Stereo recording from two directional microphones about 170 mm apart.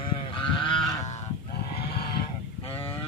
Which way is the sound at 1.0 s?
40° left (ahead or behind).